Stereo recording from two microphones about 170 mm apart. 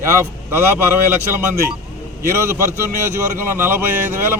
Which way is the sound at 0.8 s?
10° right (ahead or behind).